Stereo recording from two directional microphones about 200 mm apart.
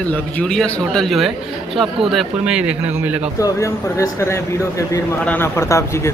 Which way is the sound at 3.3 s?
15° left (ahead or behind).